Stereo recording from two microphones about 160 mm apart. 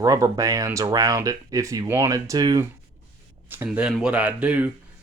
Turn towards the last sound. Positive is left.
turn(degrees=-10)  # may be behind; listen again after turning